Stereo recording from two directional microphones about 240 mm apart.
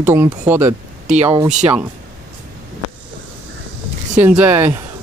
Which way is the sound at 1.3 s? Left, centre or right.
Centre.